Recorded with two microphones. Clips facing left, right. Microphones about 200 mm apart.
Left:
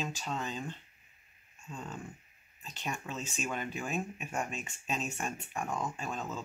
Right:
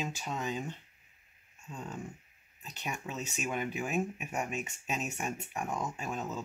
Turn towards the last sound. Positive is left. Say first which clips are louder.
# right 1 dB
turn(degrees=-5)  # may be behind; listen again after turning